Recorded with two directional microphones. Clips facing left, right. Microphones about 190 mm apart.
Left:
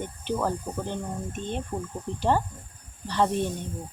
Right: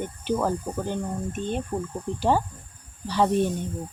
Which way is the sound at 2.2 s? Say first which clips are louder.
Right 1 dB; 5° right (ahead or behind).